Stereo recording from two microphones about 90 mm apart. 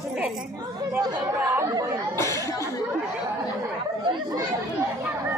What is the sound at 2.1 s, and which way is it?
Speech, 35° left (ahead or behind).